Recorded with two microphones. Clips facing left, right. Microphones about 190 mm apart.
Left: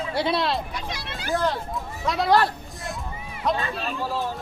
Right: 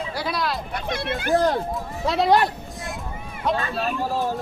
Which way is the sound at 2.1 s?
25° right (ahead or behind).